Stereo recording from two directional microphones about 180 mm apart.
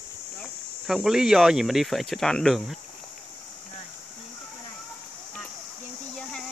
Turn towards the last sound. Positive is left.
turn(degrees=5)  # may be behind; listen again after turning